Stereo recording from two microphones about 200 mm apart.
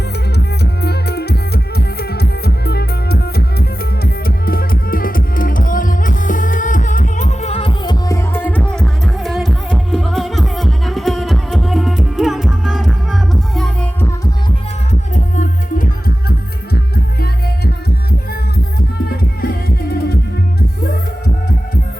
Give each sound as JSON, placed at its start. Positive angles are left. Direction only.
{"t": 0.3, "sound": "music", "side_deg": 55}
{"t": 15.1, "sound": "music", "side_deg": 40}
{"t": 19.0, "sound": "music", "side_deg": 50}